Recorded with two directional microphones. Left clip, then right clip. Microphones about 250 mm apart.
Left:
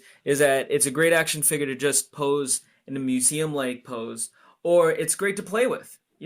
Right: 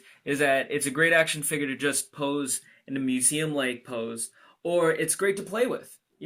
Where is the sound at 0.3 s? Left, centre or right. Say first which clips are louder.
Left 4 dB; left.